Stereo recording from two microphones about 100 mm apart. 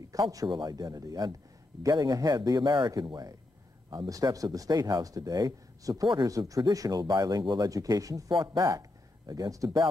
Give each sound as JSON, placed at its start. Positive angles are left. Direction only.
{"t": 0.1, "sound": "speech", "side_deg": -35}
{"t": 8.3, "sound": "speech", "side_deg": -45}
{"t": 8.6, "sound": "speech", "side_deg": -35}